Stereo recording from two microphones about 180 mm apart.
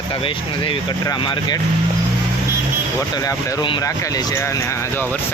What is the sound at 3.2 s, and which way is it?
Speech, 20° left (ahead or behind).